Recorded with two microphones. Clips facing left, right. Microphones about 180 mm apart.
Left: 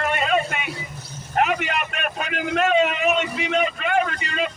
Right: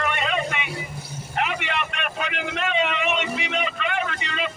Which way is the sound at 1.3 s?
45° left (ahead or behind).